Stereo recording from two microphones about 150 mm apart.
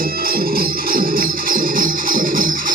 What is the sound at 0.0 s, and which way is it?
Music, 80° right.